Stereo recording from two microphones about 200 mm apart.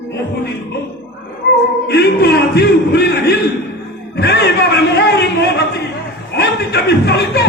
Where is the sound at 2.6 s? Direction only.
55° left (ahead or behind).